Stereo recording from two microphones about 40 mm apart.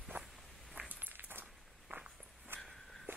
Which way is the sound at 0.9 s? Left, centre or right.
Right.